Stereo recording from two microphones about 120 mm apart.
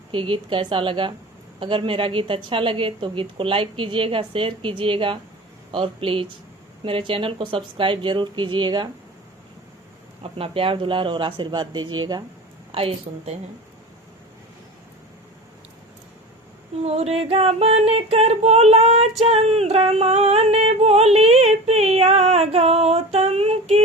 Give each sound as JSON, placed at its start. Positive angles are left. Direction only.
{"t": 0.1, "sound": "a woman's voice", "side_deg": -45}
{"t": 10.3, "sound": "a woman's voice", "side_deg": -50}
{"t": 12.7, "sound": "a woman's voice", "side_deg": -50}
{"t": 16.8, "sound": "a sound", "side_deg": -60}